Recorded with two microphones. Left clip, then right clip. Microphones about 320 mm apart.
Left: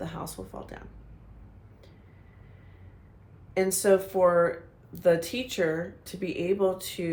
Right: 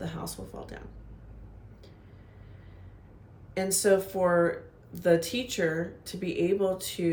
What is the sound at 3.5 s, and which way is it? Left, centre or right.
Speech, centre.